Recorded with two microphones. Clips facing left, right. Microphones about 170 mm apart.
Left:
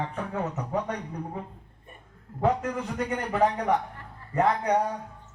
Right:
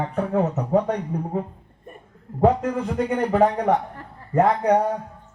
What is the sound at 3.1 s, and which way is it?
Speech, 50° right (ahead or behind).